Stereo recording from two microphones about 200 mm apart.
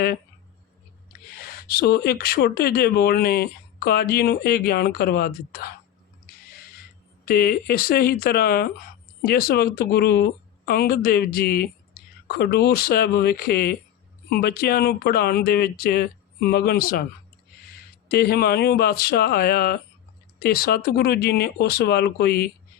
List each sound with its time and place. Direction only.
1.5 s speech: 50° left (ahead or behind)
7.3 s speech: 50° left (ahead or behind)
18.1 s speech: 50° left (ahead or behind)